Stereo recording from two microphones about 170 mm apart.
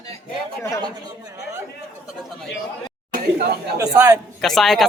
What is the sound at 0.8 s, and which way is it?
Speech, 25° right (ahead or behind).